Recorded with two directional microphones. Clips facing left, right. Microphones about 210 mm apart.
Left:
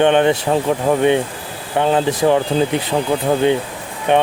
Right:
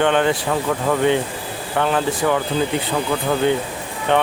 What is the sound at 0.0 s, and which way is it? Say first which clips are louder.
Speech: left 4 dB; 20° left (ahead or behind).